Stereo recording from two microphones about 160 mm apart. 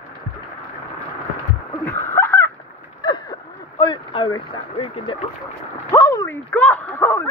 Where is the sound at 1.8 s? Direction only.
15° left (ahead or behind).